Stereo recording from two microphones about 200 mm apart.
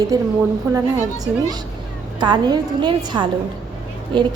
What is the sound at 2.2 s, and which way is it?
A woman's voice, 20° right (ahead or behind).